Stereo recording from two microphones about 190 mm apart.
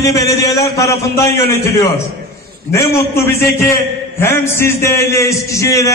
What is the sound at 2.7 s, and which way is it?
A man's voice, 15° left (ahead or behind).